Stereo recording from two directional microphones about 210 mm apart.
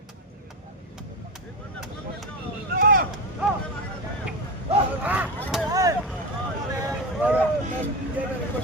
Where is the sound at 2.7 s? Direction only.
40° right (ahead or behind).